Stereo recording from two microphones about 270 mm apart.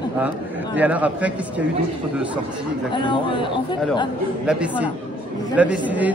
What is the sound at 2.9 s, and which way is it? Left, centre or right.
Speech, centre.